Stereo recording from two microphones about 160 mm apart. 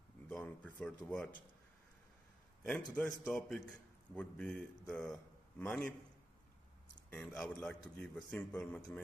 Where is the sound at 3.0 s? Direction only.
10° left (ahead or behind).